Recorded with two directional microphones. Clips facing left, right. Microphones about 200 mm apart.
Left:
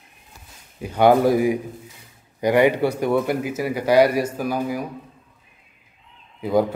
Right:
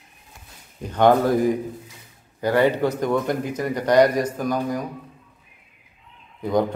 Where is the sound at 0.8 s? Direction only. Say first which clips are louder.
Left 1 dB; 10° left (ahead or behind).